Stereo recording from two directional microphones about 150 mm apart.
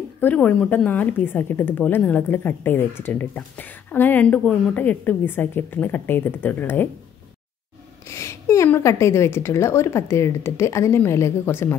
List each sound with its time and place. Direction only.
0.2 s speech: 10° left (ahead or behind)
8.1 s speech: 20° left (ahead or behind)